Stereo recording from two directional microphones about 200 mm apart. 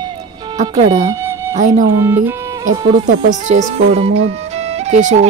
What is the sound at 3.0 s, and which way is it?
Speech, 40° right (ahead or behind).